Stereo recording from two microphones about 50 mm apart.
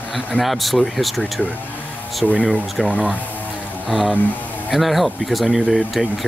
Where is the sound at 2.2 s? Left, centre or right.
Centre.